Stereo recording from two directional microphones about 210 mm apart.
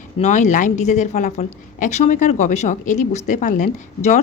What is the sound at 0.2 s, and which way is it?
Speech, 35° left (ahead or behind).